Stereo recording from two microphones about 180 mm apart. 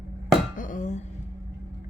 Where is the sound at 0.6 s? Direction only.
45° left (ahead or behind).